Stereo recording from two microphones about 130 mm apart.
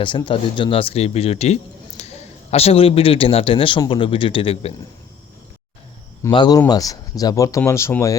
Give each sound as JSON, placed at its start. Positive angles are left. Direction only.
{"t": 0.3, "sound": "a man's voice", "side_deg": 40}
{"t": 6.3, "sound": "speech", "side_deg": 35}